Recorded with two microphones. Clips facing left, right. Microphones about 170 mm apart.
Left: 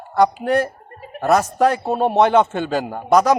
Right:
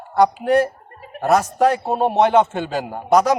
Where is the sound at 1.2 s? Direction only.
35° left (ahead or behind).